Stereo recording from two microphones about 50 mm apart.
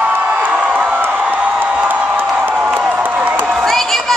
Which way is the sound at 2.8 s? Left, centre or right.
Right.